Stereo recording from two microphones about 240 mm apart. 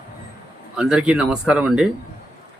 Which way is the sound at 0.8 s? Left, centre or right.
Centre.